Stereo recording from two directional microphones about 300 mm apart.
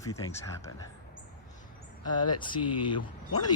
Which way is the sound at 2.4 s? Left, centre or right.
Centre.